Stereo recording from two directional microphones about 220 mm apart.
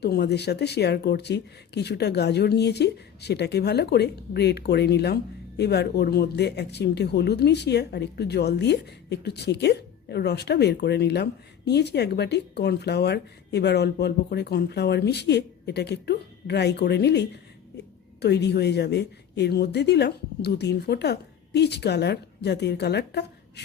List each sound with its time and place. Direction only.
0.0 s speech: 50° left (ahead or behind)